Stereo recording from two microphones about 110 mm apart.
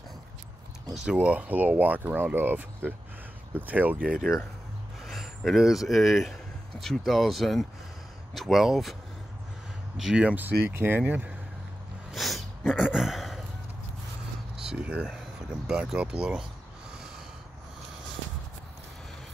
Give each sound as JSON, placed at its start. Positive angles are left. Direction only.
{"t": 1.0, "sound": "speech", "side_deg": -10}
{"t": 9.9, "sound": "speech", "side_deg": -5}
{"t": 12.1, "sound": "a sound", "side_deg": 0}
{"t": 14.6, "sound": "speech", "side_deg": -10}